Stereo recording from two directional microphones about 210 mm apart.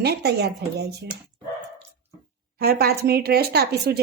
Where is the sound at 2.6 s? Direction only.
45° right (ahead or behind).